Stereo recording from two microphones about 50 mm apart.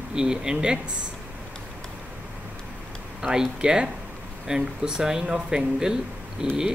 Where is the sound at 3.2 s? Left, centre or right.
Centre.